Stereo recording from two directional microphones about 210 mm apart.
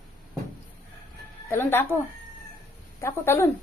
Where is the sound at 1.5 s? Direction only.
10° left (ahead or behind).